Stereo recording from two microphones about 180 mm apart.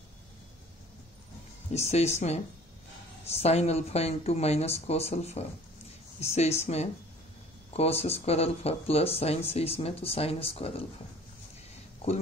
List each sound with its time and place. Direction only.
1.7 s speech: 35° left (ahead or behind)